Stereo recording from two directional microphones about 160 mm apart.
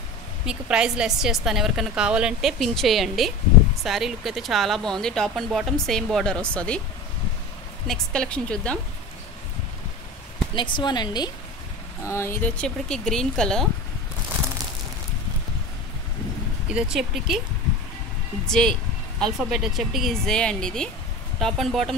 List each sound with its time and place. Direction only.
0.5 s speech: 5° right (ahead or behind)
7.8 s speech: 5° left (ahead or behind)
10.5 s speech: 30° left (ahead or behind)
12.0 s speech: 15° left (ahead or behind)
12.6 s speech: 5° left (ahead or behind)
16.7 s speech: 5° right (ahead or behind)
18.5 s speech: 5° left (ahead or behind)